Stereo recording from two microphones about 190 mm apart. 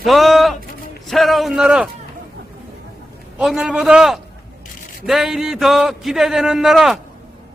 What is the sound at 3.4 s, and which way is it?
A man's voice, centre (ahead or behind).